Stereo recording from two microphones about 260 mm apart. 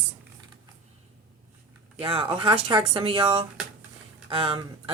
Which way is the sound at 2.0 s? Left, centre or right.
Centre.